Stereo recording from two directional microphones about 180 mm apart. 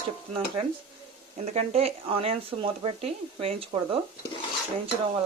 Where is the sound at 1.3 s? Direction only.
40° right (ahead or behind).